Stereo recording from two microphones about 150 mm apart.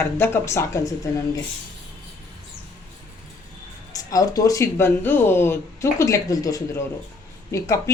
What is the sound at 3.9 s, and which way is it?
Speech, 25° left (ahead or behind).